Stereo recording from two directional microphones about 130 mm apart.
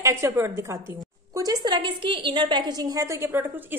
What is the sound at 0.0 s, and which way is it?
A woman's voice, 20° right (ahead or behind).